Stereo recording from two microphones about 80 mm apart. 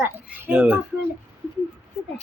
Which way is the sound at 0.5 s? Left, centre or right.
Centre.